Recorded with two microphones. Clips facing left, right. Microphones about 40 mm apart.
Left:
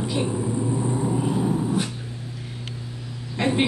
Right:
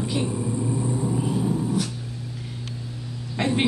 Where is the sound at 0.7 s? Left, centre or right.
Left.